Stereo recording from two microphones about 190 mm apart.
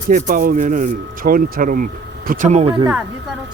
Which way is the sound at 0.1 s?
45° right (ahead or behind).